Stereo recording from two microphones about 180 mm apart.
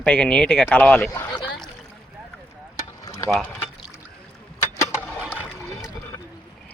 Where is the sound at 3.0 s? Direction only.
15° left (ahead or behind).